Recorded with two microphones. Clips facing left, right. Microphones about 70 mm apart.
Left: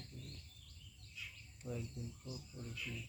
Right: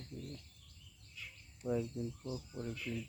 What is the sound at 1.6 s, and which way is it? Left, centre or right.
Speech, centre.